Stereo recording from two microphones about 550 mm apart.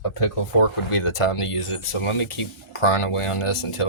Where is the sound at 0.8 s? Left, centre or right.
Left.